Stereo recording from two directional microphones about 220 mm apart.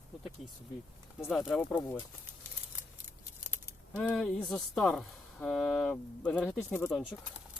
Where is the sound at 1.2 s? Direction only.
5° left (ahead or behind).